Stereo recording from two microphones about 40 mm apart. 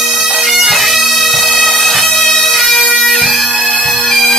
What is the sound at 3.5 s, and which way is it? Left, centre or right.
Bagpipes, left.